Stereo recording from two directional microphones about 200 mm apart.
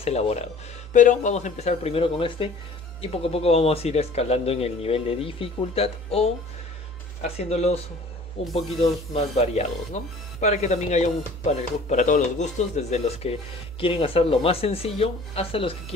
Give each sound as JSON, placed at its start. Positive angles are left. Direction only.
{"t": 0.0, "sound": "a man's voice", "side_deg": 30}
{"t": 9.1, "sound": "a man's voice", "side_deg": 35}